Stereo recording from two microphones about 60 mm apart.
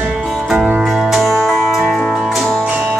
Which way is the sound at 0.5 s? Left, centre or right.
Right.